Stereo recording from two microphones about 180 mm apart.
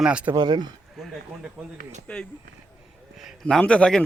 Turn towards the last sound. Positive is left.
turn(degrees=5)  # may be behind; listen again after turning